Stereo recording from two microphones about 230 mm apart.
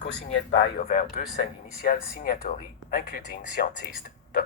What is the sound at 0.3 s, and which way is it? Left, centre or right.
Speech, left.